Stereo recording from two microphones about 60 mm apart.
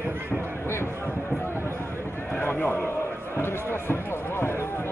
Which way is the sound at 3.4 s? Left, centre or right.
Left.